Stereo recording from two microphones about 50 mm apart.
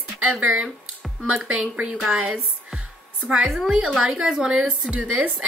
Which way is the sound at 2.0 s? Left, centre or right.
Right.